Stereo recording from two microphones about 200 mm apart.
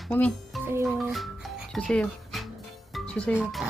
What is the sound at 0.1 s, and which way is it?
Speech, 5° left (ahead or behind).